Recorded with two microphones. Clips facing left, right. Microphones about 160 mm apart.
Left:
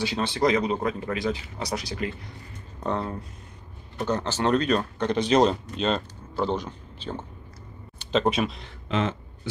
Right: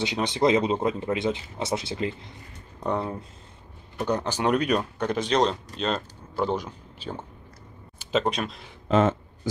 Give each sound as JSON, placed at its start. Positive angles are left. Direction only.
{"t": 0.0, "sound": "speech", "side_deg": -20}
{"t": 2.8, "sound": "speech", "side_deg": -10}
{"t": 5.3, "sound": "speech", "side_deg": 5}
{"t": 8.8, "sound": "a sound", "side_deg": -45}